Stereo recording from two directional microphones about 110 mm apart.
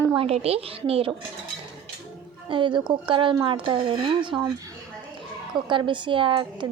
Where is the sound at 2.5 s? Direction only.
50° right (ahead or behind).